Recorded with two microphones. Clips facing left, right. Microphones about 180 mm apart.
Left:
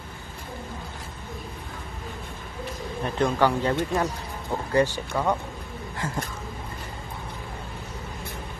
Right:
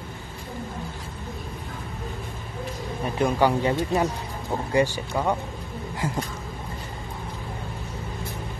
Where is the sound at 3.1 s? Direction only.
10° right (ahead or behind).